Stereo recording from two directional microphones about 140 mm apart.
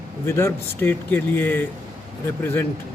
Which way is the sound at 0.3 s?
20° left (ahead or behind).